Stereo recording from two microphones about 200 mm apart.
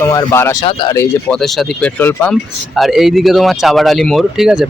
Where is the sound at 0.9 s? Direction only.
10° left (ahead or behind).